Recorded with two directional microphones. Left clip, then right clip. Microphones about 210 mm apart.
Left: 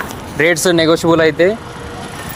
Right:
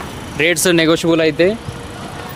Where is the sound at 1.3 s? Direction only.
20° left (ahead or behind).